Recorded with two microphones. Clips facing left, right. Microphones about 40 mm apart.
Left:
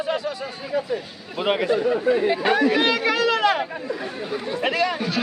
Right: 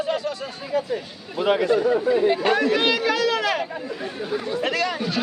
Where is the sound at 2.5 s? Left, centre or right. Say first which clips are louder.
Left 1 dB; centre.